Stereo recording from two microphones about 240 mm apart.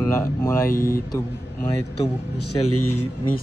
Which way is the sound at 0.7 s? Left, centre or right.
Left.